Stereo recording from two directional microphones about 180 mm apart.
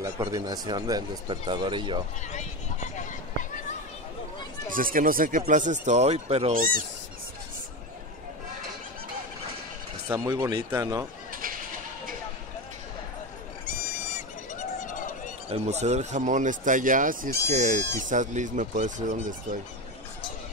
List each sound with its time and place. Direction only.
0.0 s speech: 20° right (ahead or behind)
2.3 s a sound: 40° left (ahead or behind)
4.7 s speech: 50° right (ahead or behind); by 6.5 s 35° right (ahead or behind)
6.5 s speech: 50° right (ahead or behind)
10.0 s speech: 20° right (ahead or behind)
13.7 s a sound: 45° left (ahead or behind)
15.5 s speech: 35° right (ahead or behind)